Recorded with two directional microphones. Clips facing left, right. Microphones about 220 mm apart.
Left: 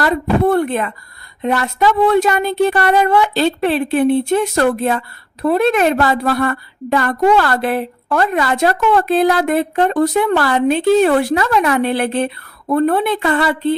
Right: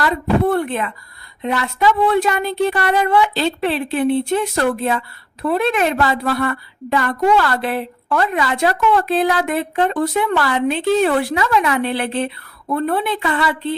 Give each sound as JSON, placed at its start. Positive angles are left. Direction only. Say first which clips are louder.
{"t": 0.0, "sound": "a woman's voice", "louder": "left 2 dB", "side_deg": 45}